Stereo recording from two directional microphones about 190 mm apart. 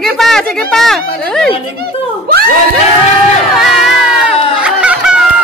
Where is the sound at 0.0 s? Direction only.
Centre (ahead or behind).